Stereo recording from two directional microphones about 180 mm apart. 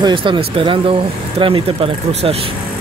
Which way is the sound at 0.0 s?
30° right (ahead or behind).